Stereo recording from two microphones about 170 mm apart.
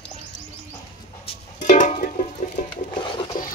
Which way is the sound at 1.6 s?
50° left (ahead or behind).